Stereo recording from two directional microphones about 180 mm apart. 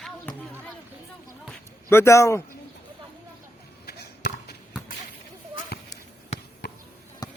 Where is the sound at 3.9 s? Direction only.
60° left (ahead or behind).